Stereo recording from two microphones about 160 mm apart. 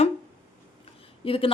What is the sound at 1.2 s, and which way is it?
Speech, 35° left (ahead or behind).